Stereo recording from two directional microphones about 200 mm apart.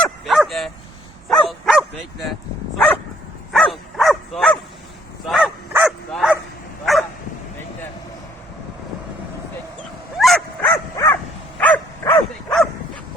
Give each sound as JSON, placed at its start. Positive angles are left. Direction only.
{"t": 0.0, "sound": "bow-wow", "side_deg": 0}
{"t": 1.3, "sound": "dog", "side_deg": 0}
{"t": 5.2, "sound": "bow-wow", "side_deg": 0}
{"t": 10.2, "sound": "dog", "side_deg": 0}
{"t": 11.0, "sound": "dog", "side_deg": 15}
{"t": 11.6, "sound": "dog", "side_deg": 5}